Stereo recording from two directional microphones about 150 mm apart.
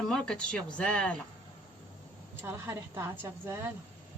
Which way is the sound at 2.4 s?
15° right (ahead or behind).